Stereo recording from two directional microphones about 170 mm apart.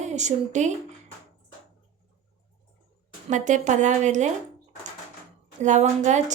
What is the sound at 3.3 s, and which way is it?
A woman's voice, 45° right (ahead or behind).